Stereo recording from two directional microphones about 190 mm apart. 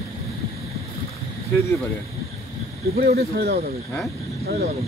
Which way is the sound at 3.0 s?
55° right (ahead or behind).